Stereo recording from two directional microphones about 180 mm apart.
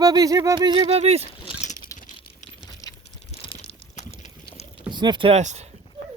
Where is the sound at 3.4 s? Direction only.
30° left (ahead or behind).